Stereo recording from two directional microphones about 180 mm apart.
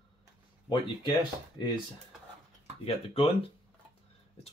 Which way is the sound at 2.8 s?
30° left (ahead or behind).